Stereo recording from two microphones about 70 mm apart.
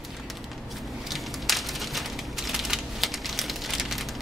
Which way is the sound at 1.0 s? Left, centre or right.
Centre.